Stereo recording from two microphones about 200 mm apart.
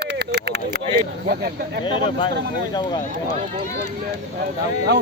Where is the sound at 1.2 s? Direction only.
50° right (ahead or behind).